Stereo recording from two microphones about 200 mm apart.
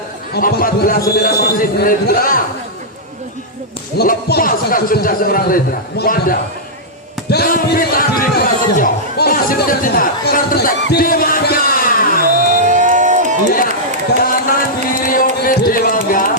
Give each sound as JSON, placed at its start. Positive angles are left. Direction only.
{"t": 0.3, "sound": "a man's voice", "side_deg": 50}
{"t": 3.9, "sound": "a man's voice", "side_deg": 50}
{"t": 12.4, "sound": "a sound", "side_deg": -40}
{"t": 14.2, "sound": "music", "side_deg": 45}